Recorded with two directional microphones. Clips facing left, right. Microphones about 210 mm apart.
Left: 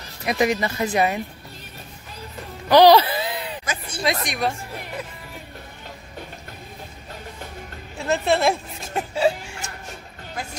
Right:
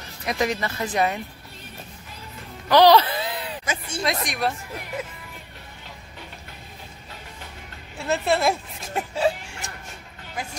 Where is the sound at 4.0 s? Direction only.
Centre (ahead or behind).